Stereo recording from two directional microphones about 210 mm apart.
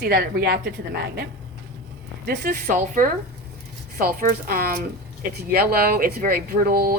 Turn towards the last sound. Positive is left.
turn(degrees=-45)  # may be behind; listen again after turning